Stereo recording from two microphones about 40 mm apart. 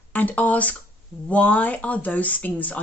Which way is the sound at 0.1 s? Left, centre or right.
Left.